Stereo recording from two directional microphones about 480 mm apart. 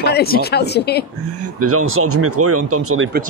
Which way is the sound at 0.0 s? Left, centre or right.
Centre.